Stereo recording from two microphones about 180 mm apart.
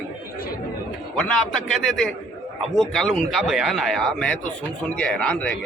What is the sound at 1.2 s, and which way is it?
Speech, 5° left (ahead or behind).